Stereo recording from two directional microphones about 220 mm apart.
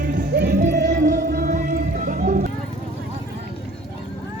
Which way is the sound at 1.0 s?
35° right (ahead or behind).